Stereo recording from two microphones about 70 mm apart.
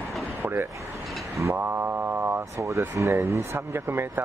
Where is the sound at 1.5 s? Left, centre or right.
Right.